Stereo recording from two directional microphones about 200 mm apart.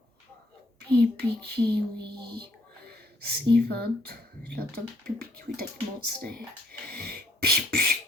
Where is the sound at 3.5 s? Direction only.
55° right (ahead or behind).